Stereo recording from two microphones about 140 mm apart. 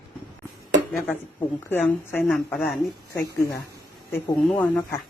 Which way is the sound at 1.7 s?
15° left (ahead or behind).